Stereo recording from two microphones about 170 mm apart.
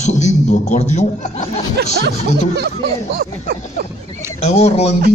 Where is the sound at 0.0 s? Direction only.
45° left (ahead or behind).